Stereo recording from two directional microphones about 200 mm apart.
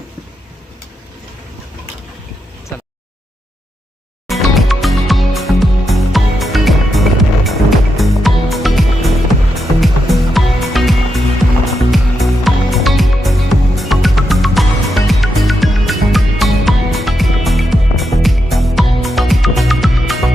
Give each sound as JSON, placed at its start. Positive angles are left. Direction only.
{"t": 4.3, "sound": "music", "side_deg": 0}